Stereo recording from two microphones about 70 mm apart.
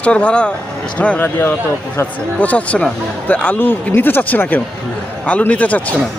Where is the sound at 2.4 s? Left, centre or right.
Left.